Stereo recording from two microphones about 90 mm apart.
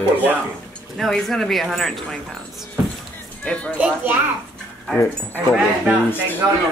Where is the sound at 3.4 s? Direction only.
15° left (ahead or behind).